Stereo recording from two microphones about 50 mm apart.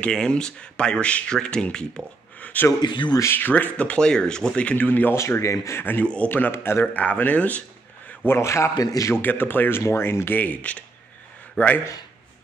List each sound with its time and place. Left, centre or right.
0.0 s speech: centre
2.5 s speech: left
4.8 s speech: left
5.1 s a man's voice: left
5.8 s speech: left
6.5 s a man's voice: left
6.9 s speech: left
8.3 s a man's voice: left
9.2 s speech: left
10.4 s speech: left